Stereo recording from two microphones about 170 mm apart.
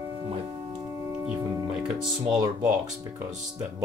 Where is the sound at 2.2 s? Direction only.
25° right (ahead or behind).